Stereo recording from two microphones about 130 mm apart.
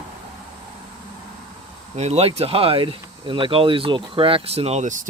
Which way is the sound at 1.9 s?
55° right (ahead or behind).